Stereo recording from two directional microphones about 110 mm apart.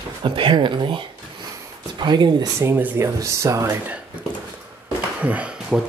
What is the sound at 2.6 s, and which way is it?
Speech, 15° right (ahead or behind).